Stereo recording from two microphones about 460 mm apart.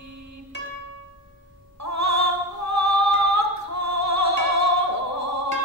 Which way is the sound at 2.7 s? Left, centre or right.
Right.